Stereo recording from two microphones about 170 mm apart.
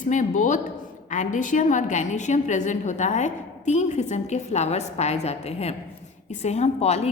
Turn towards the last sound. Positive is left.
turn(degrees=40)  # may be behind; listen again after turning